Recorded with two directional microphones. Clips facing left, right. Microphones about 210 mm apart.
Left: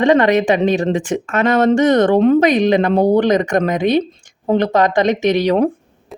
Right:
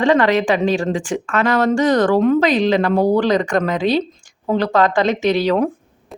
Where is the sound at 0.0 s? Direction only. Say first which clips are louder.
Left 2 dB; 20° left (ahead or behind).